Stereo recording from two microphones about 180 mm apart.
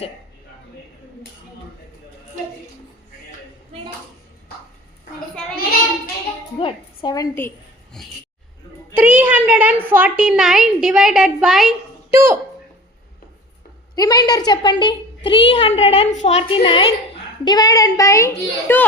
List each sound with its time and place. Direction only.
6.6 s a woman's voice: 25° left (ahead or behind)
8.0 s a woman's voice: centre (ahead or behind)
9.0 s a woman's voice: 10° right (ahead or behind)
12.1 s speech: 15° right (ahead or behind)
13.9 s a woman's voice: 20° left (ahead or behind)